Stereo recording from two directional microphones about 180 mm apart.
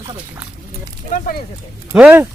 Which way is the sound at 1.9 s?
10° right (ahead or behind).